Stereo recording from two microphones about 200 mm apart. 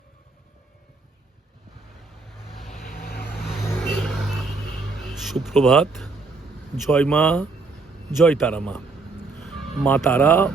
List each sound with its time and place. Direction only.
2.8 s vehicle: 45° left (ahead or behind)
3.4 s vehicle: centre (ahead or behind)
3.7 s vehicle: 10° left (ahead or behind)
4.0 s vehicle: centre (ahead or behind)
5.1 s a man's voice: centre (ahead or behind)